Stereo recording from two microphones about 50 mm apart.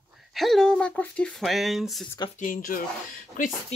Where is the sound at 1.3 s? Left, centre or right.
Centre.